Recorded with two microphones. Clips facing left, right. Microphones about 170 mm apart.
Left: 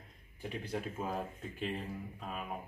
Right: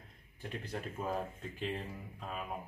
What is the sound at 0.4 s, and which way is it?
Speech, 5° left (ahead or behind).